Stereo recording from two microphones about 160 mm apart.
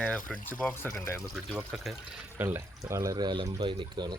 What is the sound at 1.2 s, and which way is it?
Speech, centre (ahead or behind).